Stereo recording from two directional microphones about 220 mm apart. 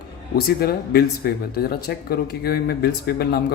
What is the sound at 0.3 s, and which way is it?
A man's voice, 45° left (ahead or behind).